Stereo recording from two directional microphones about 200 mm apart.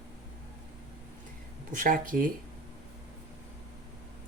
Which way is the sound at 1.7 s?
40° right (ahead or behind).